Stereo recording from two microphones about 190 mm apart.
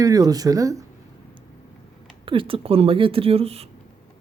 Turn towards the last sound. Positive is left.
turn(degrees=-30)  # may be behind; listen again after turning